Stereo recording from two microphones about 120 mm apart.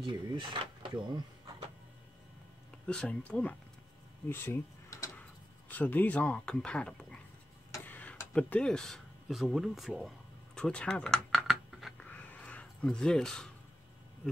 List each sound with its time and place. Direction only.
0.0 s speech: 40° right (ahead or behind)
2.9 s speech: 10° left (ahead or behind); by 5.1 s 25° left (ahead or behind)
5.7 s speech: 15° left (ahead or behind)
7.8 s tick-tock: 15° left (ahead or behind)
8.3 s speech: 10° left (ahead or behind)
12.0 s a sound: 15° left (ahead or behind)